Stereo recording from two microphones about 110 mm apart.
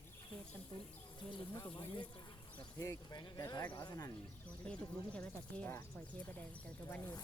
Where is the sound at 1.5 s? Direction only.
40° left (ahead or behind).